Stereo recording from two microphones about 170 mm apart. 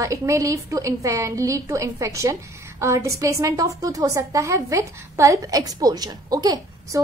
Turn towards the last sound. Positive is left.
turn(degrees=-20)  # may be behind; listen again after turning